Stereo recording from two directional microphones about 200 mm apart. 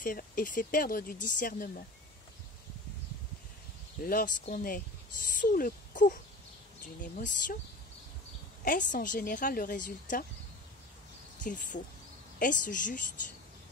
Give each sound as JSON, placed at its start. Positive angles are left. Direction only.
{"t": 0.0, "sound": "speech", "side_deg": 45}
{"t": 4.0, "sound": "a woman's voice", "side_deg": 45}
{"t": 8.6, "sound": "a woman's voice", "side_deg": 40}
{"t": 11.4, "sound": "a woman's voice", "side_deg": 40}